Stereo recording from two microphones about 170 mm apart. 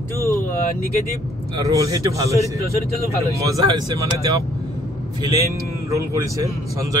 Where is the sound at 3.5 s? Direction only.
25° right (ahead or behind).